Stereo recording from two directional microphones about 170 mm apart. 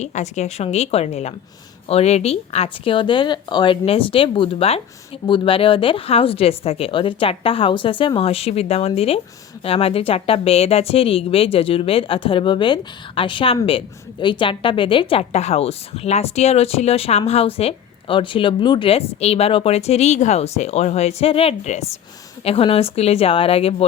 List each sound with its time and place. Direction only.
0.0 s a woman's voice: 40° left (ahead or behind)